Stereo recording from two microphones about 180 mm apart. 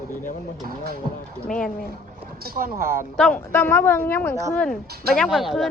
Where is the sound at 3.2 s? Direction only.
5° left (ahead or behind).